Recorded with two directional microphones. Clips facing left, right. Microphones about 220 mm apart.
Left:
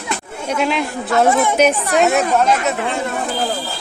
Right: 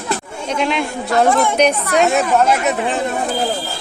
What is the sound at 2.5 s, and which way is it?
Speech, 15° right (ahead or behind).